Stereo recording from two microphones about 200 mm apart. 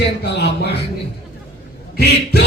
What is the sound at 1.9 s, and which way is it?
Speech, 55° left (ahead or behind).